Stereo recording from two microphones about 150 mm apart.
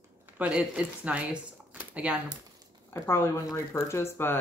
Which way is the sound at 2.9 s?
15° left (ahead or behind).